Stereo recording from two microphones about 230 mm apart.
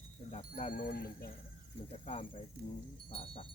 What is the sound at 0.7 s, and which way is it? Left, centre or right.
Speech, left.